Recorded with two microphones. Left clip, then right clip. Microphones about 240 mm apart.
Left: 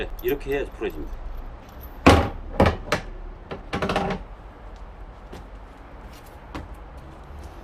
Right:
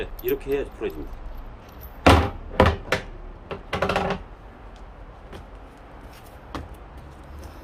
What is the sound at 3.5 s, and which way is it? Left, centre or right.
Music, centre.